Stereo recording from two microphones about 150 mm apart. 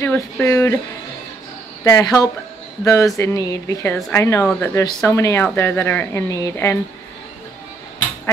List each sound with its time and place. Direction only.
0.0 s speech: 15° left (ahead or behind)
1.9 s speech: 25° left (ahead or behind)